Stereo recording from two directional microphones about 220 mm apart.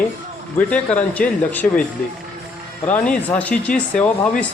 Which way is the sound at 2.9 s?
5° left (ahead or behind).